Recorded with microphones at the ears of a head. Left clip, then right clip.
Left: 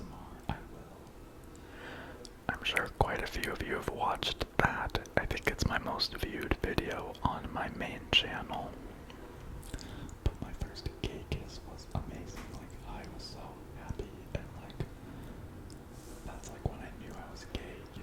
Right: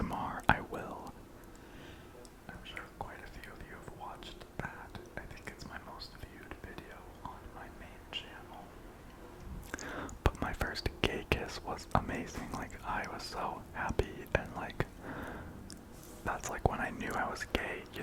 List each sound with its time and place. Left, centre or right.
0.0 s whispering: right
2.5 s whispering: left
9.8 s whispering: right